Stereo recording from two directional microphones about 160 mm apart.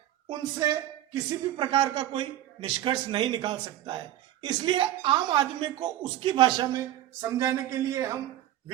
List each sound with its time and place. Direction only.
0.3 s a man's voice: 20° right (ahead or behind)